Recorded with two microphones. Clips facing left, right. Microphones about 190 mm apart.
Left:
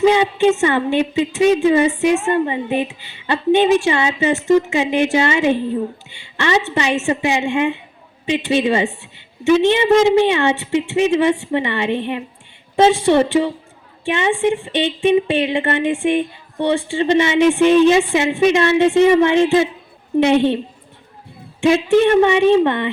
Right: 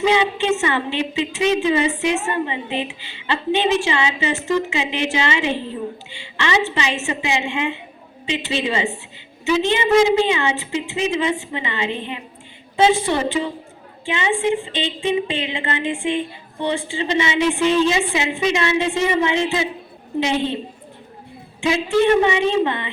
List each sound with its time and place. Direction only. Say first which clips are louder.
0.0 s a woman's voice: left 5 dB; 50° left (ahead or behind)
22.2 s a woman's voice: left 5 dB; 55° left (ahead or behind)